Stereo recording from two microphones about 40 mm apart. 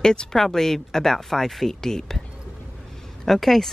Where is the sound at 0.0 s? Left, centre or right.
Centre.